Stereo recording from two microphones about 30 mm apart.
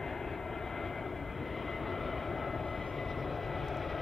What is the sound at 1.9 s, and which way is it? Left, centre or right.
Vehicle, centre.